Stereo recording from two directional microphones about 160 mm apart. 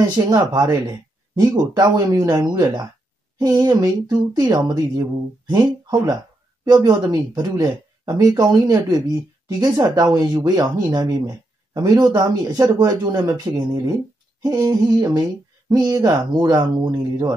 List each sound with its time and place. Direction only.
0.1 s speech: 25° right (ahead or behind)